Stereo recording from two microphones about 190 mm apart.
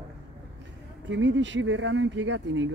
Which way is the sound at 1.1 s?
75° right (ahead or behind).